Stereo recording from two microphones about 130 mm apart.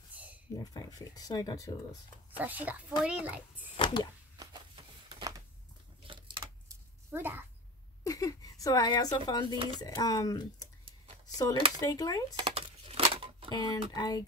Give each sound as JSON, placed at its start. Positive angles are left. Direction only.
{"t": 0.1, "sound": "a sound", "side_deg": -10}
{"t": 0.6, "sound": "speech", "side_deg": 30}
{"t": 2.3, "sound": "a child's voice", "side_deg": -15}
{"t": 3.7, "sound": "speech", "side_deg": 40}
{"t": 6.0, "sound": "a sound", "side_deg": -40}
{"t": 7.1, "sound": "a child's voice", "side_deg": -15}
{"t": 8.0, "sound": "a sound", "side_deg": 25}
{"t": 9.8, "sound": "speech", "side_deg": 30}
{"t": 11.5, "sound": "speech", "side_deg": -40}
{"t": 11.8, "sound": "speech", "side_deg": 30}
{"t": 12.4, "sound": "a sound", "side_deg": -45}
{"t": 13.5, "sound": "speech", "side_deg": 35}